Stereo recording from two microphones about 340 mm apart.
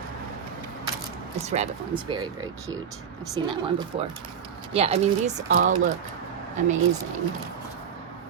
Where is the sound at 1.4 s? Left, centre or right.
Centre.